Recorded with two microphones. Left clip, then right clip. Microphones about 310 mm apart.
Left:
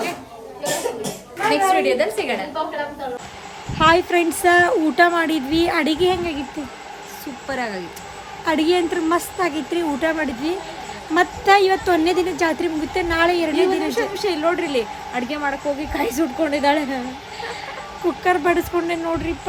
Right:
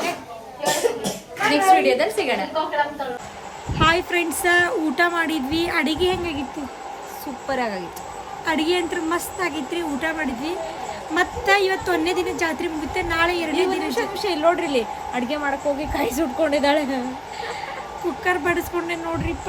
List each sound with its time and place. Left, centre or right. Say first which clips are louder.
1.5 s a woman's voice: right 1 dB; centre
3.8 s a woman's voice: left 4 dB; centre
7.4 s a woman's voice: right 1 dB; centre
8.4 s a woman's voice: left 3 dB; centre
13.9 s a woman's voice: left 2 dB; centre
18.2 s a woman's voice: left 3 dB; centre